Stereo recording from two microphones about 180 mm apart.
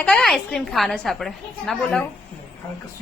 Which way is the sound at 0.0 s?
5° left (ahead or behind).